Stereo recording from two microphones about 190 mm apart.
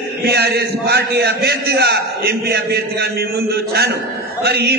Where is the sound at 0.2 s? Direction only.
60° right (ahead or behind).